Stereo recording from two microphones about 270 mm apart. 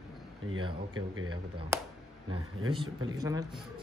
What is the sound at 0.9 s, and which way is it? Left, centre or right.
Speech, right.